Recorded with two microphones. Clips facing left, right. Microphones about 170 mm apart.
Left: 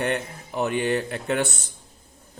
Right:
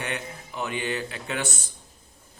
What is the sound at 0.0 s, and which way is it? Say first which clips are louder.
A man's voice: left 7 dB; 50° left (ahead or behind).